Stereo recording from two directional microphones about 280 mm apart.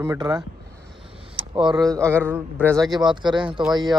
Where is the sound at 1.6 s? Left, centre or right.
Centre.